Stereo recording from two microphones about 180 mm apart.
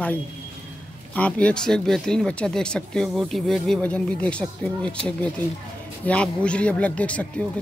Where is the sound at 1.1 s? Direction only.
5° left (ahead or behind).